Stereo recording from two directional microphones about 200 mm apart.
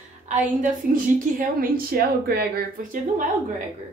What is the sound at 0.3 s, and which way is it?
A woman's voice, 40° right (ahead or behind).